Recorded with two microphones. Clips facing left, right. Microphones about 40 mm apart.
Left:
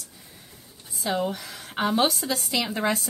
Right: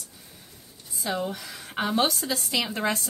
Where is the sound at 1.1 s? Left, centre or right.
Centre.